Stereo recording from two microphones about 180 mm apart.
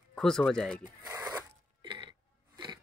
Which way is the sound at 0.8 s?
20° right (ahead or behind).